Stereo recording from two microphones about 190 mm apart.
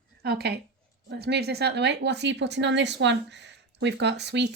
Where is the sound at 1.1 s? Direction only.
60° right (ahead or behind).